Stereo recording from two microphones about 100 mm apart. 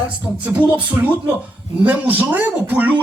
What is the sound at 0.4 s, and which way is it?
Speech, 15° right (ahead or behind).